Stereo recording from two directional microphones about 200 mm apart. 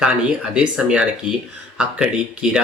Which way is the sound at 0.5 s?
5° right (ahead or behind).